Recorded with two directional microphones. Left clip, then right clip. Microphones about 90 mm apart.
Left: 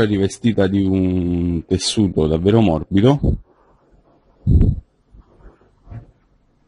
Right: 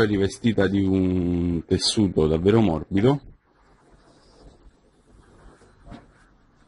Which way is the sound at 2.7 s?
5° left (ahead or behind).